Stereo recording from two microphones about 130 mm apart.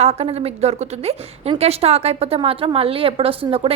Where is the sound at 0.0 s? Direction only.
55° right (ahead or behind).